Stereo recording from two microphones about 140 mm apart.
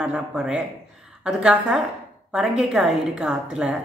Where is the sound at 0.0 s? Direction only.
5° right (ahead or behind).